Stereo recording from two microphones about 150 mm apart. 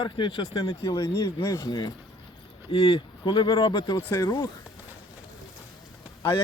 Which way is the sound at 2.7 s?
40° left (ahead or behind).